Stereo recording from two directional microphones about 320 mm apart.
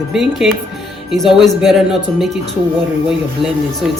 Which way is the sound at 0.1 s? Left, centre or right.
Centre.